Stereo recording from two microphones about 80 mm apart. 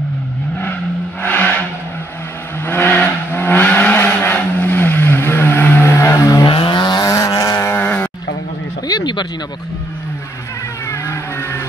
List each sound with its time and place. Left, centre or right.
1.2 s vehicle: left
2.6 s vehicle: left
6.4 s vehicle: left
7.0 s vehicle: left
7.7 s a sound: left
8.8 s a sound: left
10.9 s vehicle: left